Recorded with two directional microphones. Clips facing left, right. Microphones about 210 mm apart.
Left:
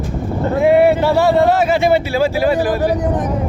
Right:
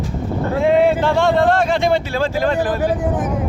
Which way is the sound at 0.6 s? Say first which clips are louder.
Left 3 dB; 10° left (ahead or behind).